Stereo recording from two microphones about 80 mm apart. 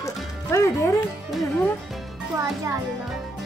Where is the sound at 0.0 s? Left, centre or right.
Left.